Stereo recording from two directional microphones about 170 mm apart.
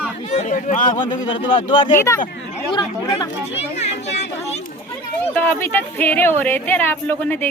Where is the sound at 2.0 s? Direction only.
15° left (ahead or behind).